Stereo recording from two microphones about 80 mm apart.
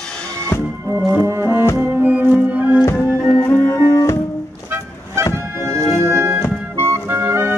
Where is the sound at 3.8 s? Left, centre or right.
Left.